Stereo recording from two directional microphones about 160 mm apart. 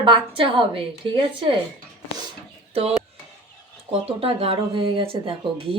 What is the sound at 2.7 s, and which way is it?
Speech, 35° right (ahead or behind).